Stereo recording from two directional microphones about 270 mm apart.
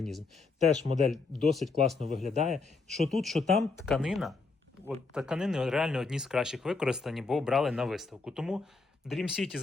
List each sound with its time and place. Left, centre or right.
0.9 s a man's voice: right
1.5 s speech: centre
2.2 s a man's voice: right
2.9 s speech: centre